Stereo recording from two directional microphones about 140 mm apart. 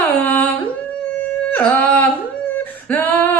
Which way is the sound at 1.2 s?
10° left (ahead or behind).